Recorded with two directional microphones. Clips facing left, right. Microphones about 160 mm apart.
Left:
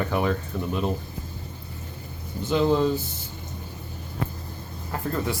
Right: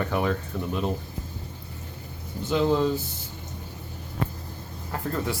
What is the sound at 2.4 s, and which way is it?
Speech, 20° left (ahead or behind).